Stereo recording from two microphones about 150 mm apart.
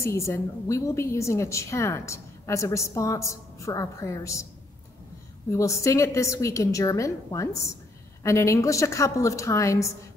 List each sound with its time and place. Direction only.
0.0 s a woman's voice: 20° left (ahead or behind)
5.5 s a woman's voice: 20° left (ahead or behind)